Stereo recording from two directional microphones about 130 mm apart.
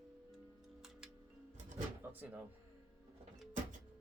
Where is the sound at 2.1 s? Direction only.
15° right (ahead or behind).